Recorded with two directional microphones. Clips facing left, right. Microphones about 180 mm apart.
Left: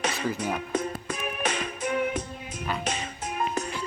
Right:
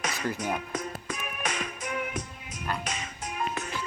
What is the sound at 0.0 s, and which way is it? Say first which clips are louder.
Music: left 3 dB; 30° left (ahead or behind).